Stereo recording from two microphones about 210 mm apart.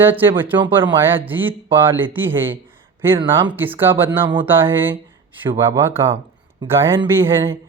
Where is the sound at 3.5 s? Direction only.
10° right (ahead or behind).